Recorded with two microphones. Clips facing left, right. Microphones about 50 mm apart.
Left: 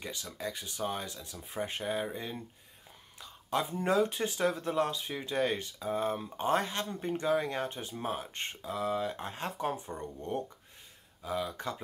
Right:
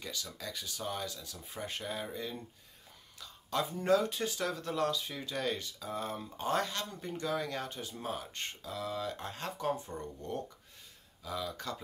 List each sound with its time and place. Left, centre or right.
0.0 s speech: left